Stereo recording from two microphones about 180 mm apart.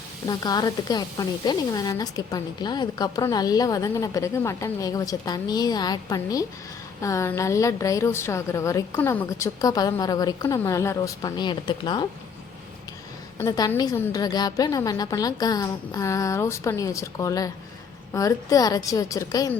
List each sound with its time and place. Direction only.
0.3 s a woman's voice: 20° left (ahead or behind)
13.4 s speech: 20° left (ahead or behind)